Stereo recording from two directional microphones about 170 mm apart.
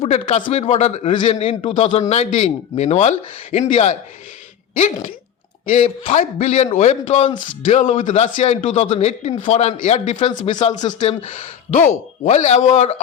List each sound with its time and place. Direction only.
0.0 s a man's voice: 35° left (ahead or behind)
6.0 s a man's voice: 40° left (ahead or behind)
10.8 s speech: 25° left (ahead or behind)
11.3 s speech: 45° left (ahead or behind)